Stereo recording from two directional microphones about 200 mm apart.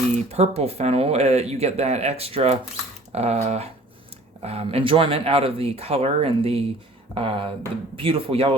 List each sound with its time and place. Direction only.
0.3 s speech: 30° right (ahead or behind)